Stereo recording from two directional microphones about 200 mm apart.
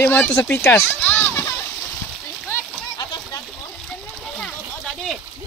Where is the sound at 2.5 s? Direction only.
20° left (ahead or behind).